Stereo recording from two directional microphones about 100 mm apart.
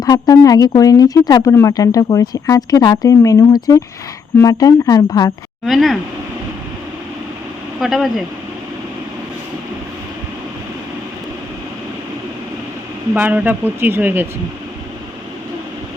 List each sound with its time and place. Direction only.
0.0 s speech: 35° left (ahead or behind)
5.6 s speech: centre (ahead or behind)
7.8 s speech: centre (ahead or behind)
13.1 s speech: 20° right (ahead or behind)